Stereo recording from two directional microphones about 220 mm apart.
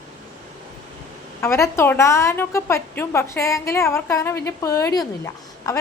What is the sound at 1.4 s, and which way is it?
A woman's voice, 10° left (ahead or behind).